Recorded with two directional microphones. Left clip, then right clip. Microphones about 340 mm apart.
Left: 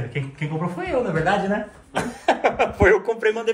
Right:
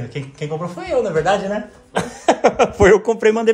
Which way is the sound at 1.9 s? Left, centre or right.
Right.